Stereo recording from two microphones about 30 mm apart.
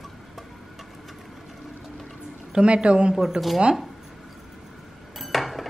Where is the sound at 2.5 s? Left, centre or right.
Right.